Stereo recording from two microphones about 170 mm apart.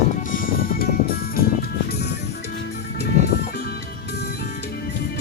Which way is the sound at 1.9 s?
70° left (ahead or behind).